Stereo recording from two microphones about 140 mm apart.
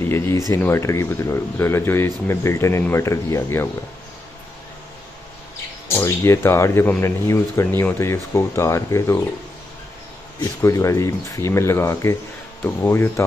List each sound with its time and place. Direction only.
0.0 s speech: 15° left (ahead or behind)
5.9 s speech: 20° left (ahead or behind)
10.6 s speech: 20° left (ahead or behind)